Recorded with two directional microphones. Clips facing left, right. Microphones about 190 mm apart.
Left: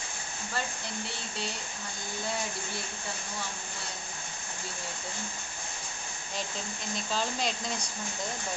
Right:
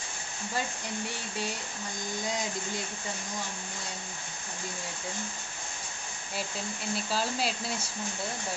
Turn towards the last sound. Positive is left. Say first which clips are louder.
# right 1 dB
turn(degrees=-5)  # may be behind; listen again after turning